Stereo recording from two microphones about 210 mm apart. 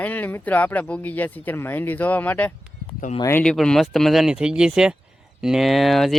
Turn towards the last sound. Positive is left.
turn(degrees=0)  # may be behind; listen again after turning